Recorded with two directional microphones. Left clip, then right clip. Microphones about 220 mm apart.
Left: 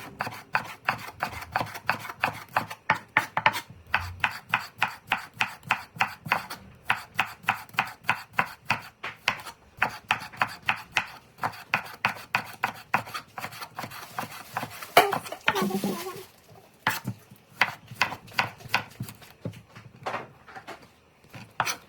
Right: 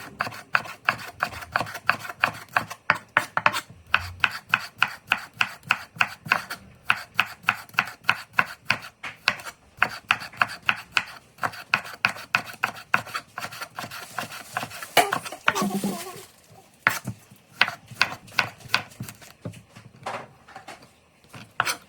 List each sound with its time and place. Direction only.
0.0 s filing: centre (ahead or behind)
16.8 s a sound: centre (ahead or behind)
17.6 s chopping: centre (ahead or behind)
21.3 s chopping: centre (ahead or behind)